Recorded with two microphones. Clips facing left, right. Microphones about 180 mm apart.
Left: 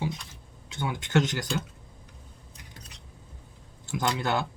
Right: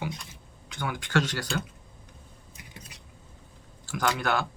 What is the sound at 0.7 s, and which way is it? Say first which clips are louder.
Speech: left 2 dB; 25° left (ahead or behind).